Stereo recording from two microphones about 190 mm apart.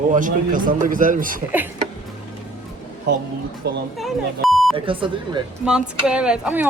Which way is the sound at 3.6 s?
60° right (ahead or behind).